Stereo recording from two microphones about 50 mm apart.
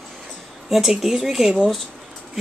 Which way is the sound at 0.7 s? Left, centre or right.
Centre.